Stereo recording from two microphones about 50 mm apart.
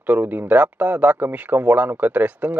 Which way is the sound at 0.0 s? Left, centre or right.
Right.